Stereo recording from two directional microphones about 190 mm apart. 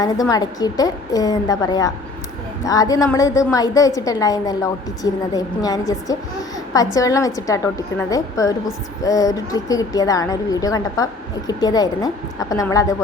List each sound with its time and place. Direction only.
0.0 s a woman's voice: 20° left (ahead or behind)